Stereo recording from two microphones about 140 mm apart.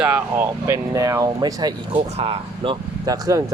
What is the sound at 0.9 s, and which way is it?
Speech, 25° right (ahead or behind).